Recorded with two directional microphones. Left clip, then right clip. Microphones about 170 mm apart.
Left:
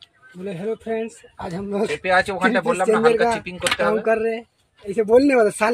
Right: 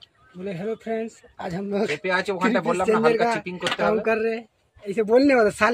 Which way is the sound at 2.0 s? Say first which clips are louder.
Left 7 dB; 75° right (ahead or behind).